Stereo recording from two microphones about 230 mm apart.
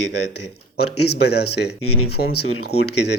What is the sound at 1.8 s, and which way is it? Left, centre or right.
Speech, left.